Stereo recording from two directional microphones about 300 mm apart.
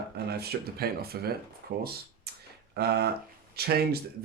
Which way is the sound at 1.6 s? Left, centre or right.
Right.